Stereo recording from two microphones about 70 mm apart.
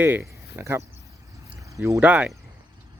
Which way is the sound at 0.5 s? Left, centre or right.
Right.